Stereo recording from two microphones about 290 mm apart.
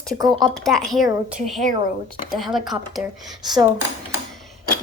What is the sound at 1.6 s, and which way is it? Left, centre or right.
Speech, right.